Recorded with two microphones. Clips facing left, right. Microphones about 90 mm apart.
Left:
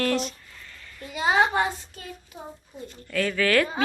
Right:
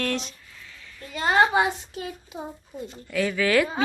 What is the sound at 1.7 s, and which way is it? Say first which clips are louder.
Speech: right 4 dB; 10° right (ahead or behind).